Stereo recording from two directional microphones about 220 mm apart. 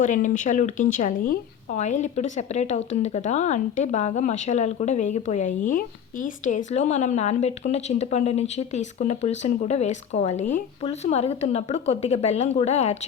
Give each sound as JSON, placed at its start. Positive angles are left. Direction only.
{"t": 0.0, "sound": "speech", "side_deg": 35}